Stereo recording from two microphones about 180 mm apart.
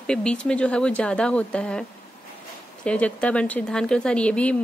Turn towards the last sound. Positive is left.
turn(degrees=5)  # may be behind; listen again after turning